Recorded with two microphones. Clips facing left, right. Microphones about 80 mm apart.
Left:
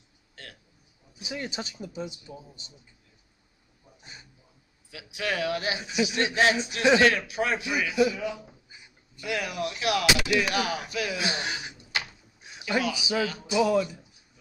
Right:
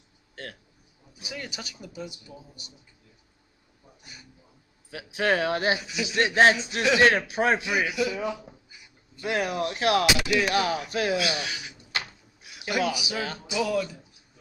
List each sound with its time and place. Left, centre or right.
1.1 s speech: left
4.0 s a sound: left
4.9 s speech: right
5.8 s speech: left
6.0 s a man's voice: right
11.1 s speech: left
12.4 s a sound: left
12.9 s speech: left